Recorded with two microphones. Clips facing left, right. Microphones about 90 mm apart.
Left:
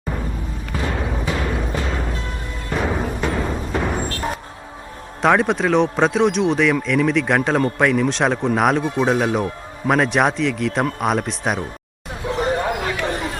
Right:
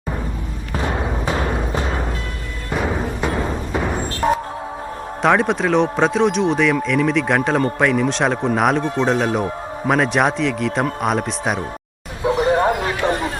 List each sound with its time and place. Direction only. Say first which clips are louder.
0.8 s music: right 2 dB; 30° right (ahead or behind)
2.7 s music: even; centre (ahead or behind)
5.2 s speech: even; centre (ahead or behind)
12.5 s a sound: right 4 dB; 40° right (ahead or behind)